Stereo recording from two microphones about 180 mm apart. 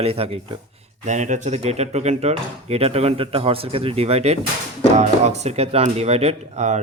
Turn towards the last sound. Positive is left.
turn(degrees=-40)  # may be behind; listen again after turning